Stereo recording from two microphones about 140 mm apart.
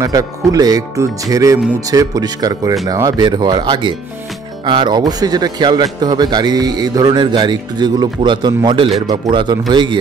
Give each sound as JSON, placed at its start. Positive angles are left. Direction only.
{"t": 0.0, "sound": "a man's voice", "side_deg": -25}